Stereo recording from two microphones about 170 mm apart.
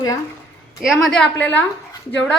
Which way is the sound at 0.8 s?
Centre (ahead or behind).